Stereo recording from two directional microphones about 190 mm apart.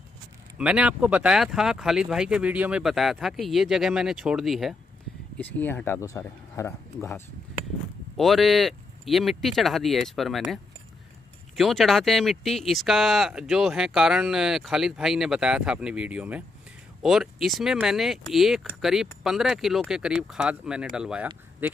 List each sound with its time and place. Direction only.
0.6 s speech: 5° right (ahead or behind)
5.4 s speech: 10° left (ahead or behind)
8.2 s speech: centre (ahead or behind)